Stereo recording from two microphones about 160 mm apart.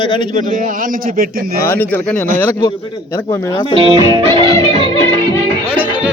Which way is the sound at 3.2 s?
20° left (ahead or behind).